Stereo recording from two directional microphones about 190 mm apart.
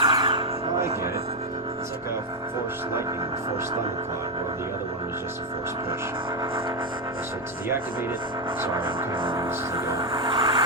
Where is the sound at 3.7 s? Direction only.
30° right (ahead or behind).